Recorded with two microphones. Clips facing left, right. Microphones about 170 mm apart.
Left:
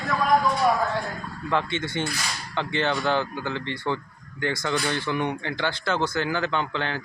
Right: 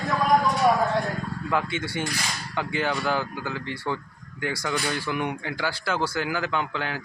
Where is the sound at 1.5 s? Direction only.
10° right (ahead or behind).